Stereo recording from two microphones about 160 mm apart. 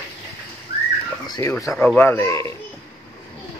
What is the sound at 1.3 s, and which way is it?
A child's voice, 20° left (ahead or behind).